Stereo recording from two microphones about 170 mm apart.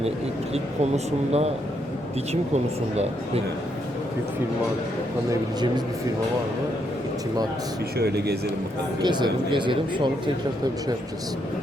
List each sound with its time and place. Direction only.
0.5 s speech: 40° right (ahead or behind)
5.3 s speech: 25° right (ahead or behind)
7.9 s speech: 75° right (ahead or behind)
9.0 s speech: 25° right (ahead or behind)